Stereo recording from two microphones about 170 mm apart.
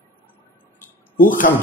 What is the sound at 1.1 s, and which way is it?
Speech, 50° left (ahead or behind).